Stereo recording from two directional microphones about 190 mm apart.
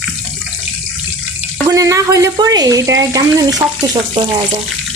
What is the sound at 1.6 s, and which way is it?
Speech, 20° right (ahead or behind).